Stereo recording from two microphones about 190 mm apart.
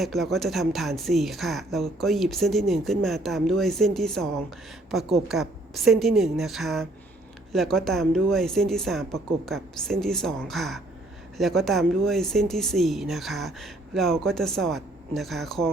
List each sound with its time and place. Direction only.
0.0 s speech: centre (ahead or behind)